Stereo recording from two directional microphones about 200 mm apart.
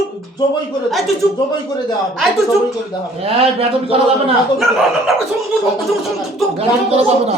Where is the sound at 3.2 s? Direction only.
30° right (ahead or behind).